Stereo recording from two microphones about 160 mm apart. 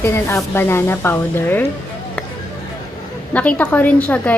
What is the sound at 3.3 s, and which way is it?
A woman's voice, 10° left (ahead or behind).